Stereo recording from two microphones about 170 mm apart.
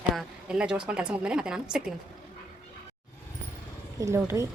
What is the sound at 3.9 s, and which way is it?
Speech, 15° right (ahead or behind).